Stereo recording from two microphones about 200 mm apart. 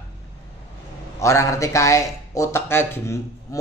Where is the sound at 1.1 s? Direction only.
15° left (ahead or behind).